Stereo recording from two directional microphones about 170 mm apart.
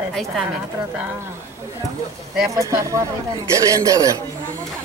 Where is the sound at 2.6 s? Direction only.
20° right (ahead or behind).